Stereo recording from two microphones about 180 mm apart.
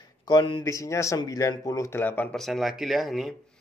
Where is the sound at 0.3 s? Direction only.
25° left (ahead or behind).